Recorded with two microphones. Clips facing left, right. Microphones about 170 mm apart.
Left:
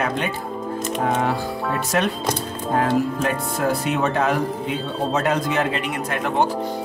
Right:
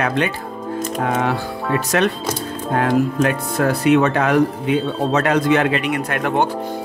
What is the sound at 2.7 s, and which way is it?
Speech, 70° right (ahead or behind).